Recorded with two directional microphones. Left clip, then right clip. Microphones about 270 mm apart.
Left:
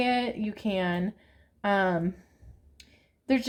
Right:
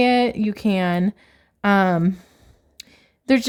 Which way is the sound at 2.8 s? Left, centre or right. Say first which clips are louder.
Right 12 dB; right.